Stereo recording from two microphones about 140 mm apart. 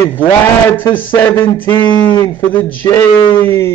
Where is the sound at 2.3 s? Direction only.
15° left (ahead or behind).